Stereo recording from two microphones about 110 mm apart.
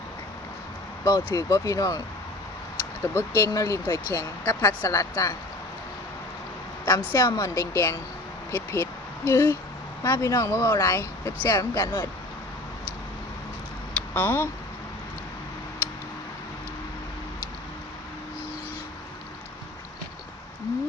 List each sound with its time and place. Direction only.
1.0 s speech: 30° left (ahead or behind)
3.2 s speech: 25° left (ahead or behind)
6.8 s speech: 25° left (ahead or behind)
14.1 s speech: 20° left (ahead or behind)